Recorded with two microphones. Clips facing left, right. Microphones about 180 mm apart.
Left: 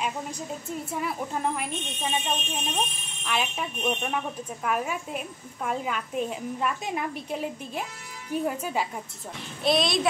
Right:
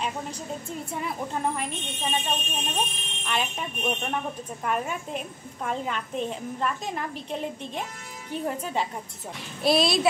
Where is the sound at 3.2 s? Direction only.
5° left (ahead or behind).